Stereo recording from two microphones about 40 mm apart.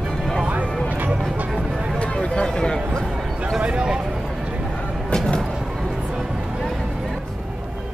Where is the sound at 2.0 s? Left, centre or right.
Left.